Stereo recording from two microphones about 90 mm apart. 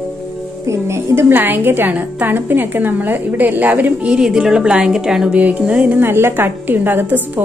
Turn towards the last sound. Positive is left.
turn(degrees=-20)  # may be behind; listen again after turning